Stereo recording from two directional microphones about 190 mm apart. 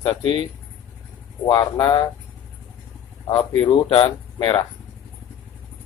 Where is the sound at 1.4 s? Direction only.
25° left (ahead or behind).